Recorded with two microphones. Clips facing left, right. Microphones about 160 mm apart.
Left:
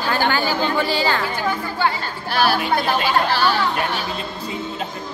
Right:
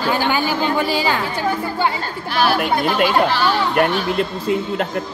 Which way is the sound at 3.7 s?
65° right (ahead or behind).